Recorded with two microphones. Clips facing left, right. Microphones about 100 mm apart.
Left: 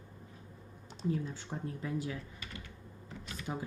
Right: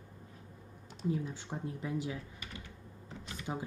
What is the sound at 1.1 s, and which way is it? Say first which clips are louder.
Speech: even; 15° right (ahead or behind).